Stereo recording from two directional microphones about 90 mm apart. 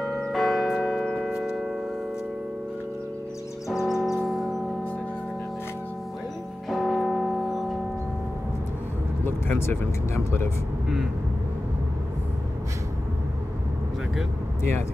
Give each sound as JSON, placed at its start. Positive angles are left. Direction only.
{"t": 0.2, "sound": "church bell", "side_deg": 5}
{"t": 3.6, "sound": "a sound", "side_deg": -5}
{"t": 6.7, "sound": "church bell", "side_deg": 0}
{"t": 9.2, "sound": "speech", "side_deg": 25}
{"t": 14.6, "sound": "speech", "side_deg": 30}